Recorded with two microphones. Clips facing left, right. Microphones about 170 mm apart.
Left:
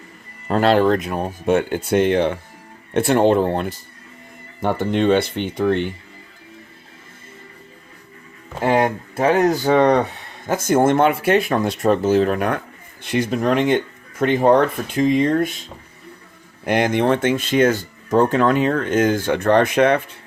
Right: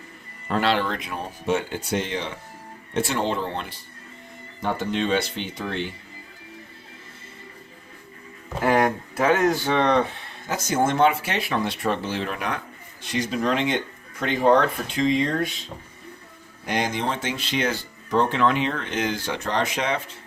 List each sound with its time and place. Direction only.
0.4 s speech: 40° left (ahead or behind)
8.6 s speech: 25° left (ahead or behind); by 10.0 s 40° left (ahead or behind)
10.4 s speech: 50° left (ahead or behind)
16.6 s speech: 55° left (ahead or behind)